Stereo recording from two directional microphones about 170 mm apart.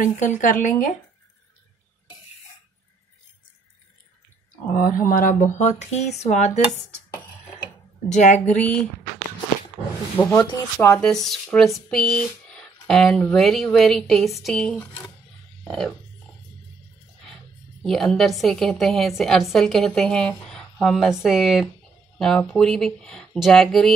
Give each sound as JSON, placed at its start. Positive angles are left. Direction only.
{"t": 0.0, "sound": "speech", "side_deg": 50}
{"t": 4.7, "sound": "speech", "side_deg": 55}
{"t": 8.1, "sound": "speech", "side_deg": 45}
{"t": 10.2, "sound": "speech", "side_deg": 25}
{"t": 10.8, "sound": "a woman's voice", "side_deg": 10}
{"t": 17.8, "sound": "a woman's voice", "side_deg": 0}